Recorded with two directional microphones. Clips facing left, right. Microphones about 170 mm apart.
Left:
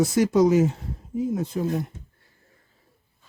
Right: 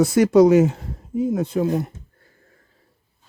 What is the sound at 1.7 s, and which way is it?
Speech, 60° right (ahead or behind).